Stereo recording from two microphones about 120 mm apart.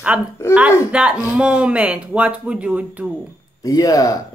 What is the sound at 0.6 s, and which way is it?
Speech, 10° right (ahead or behind).